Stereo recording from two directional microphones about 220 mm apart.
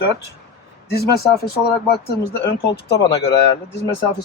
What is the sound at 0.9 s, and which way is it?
Speech, 45° left (ahead or behind).